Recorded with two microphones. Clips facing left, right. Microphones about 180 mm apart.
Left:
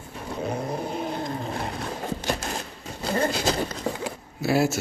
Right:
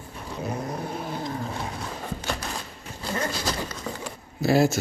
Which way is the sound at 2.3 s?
45° left (ahead or behind).